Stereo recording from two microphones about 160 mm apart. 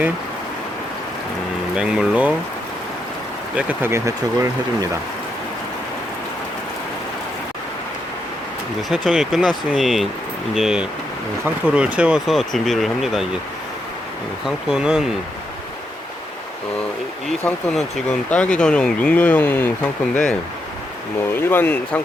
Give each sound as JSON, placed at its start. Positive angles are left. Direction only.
{"t": 1.7, "sound": "speech", "side_deg": -5}
{"t": 3.5, "sound": "speech", "side_deg": -10}
{"t": 8.9, "sound": "speech", "side_deg": 0}
{"t": 14.4, "sound": "speech", "side_deg": -5}
{"t": 17.2, "sound": "speech", "side_deg": 0}
{"t": 21.3, "sound": "speech", "side_deg": 10}